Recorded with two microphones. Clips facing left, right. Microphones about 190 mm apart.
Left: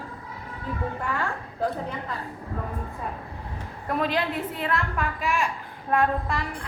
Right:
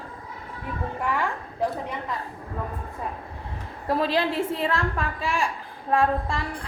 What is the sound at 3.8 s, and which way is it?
A woman's voice, 30° right (ahead or behind).